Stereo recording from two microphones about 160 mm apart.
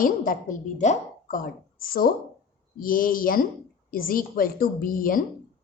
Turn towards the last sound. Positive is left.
turn(degrees=60)  # may be behind; listen again after turning